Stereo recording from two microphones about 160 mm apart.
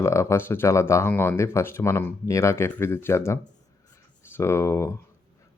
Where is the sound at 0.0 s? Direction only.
15° left (ahead or behind).